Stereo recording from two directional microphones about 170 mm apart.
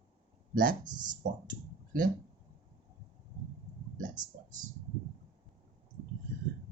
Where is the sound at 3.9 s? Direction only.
50° right (ahead or behind).